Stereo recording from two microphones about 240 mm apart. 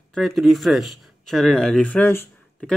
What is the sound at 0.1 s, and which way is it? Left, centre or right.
Speech, centre.